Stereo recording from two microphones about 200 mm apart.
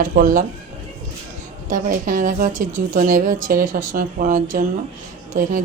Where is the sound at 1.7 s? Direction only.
45° right (ahead or behind).